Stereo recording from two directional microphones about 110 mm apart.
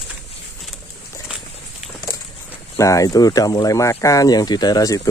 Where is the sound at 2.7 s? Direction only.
30° left (ahead or behind).